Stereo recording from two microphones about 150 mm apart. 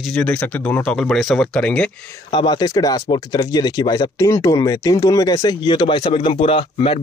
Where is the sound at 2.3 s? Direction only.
30° left (ahead or behind).